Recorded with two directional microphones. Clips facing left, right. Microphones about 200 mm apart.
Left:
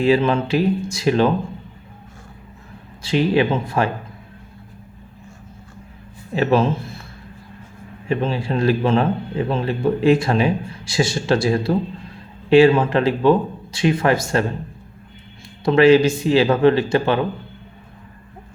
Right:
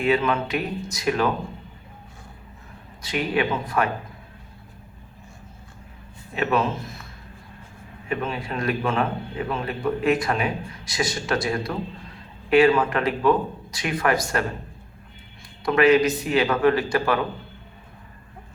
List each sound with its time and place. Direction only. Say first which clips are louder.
0.0 s speech: left 5 dB; 30° left (ahead or behind)
3.0 s speech: left 7 dB; 30° left (ahead or behind)
6.3 s speech: left 6 dB; 30° left (ahead or behind)
8.0 s speech: left 6 dB; 30° left (ahead or behind)
15.6 s speech: left 5 dB; 30° left (ahead or behind)